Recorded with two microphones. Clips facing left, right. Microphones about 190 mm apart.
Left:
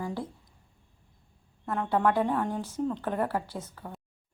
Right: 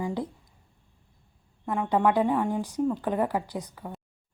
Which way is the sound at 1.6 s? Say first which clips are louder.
Right 2 dB; 10° right (ahead or behind).